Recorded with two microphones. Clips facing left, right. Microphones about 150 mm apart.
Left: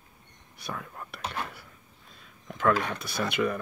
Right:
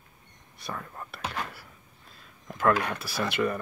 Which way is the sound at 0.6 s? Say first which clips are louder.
Even; centre (ahead or behind).